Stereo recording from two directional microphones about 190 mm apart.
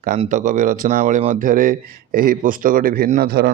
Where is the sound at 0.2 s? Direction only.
40° right (ahead or behind).